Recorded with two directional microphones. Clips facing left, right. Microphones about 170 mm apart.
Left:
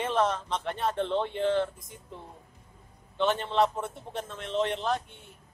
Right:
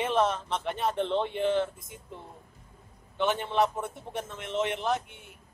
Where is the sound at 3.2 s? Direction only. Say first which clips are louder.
Left 1 dB; 15° right (ahead or behind).